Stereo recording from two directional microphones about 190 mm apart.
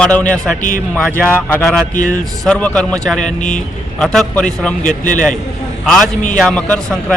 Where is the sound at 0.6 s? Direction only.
45° left (ahead or behind).